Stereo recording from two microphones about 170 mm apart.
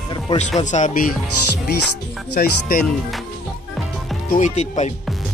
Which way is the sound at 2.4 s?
60° left (ahead or behind).